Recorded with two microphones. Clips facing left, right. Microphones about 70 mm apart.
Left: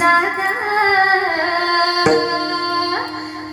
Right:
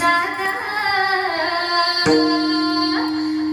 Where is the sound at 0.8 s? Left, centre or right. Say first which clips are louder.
Left 5 dB; left.